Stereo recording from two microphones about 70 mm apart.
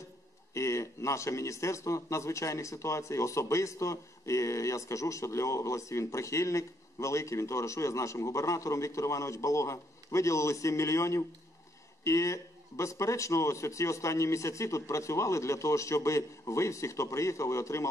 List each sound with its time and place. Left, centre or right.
0.6 s speech: left